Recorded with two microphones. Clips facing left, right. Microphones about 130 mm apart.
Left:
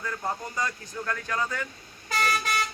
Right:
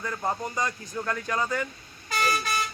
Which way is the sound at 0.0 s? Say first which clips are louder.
Right 2 dB; 20° right (ahead or behind).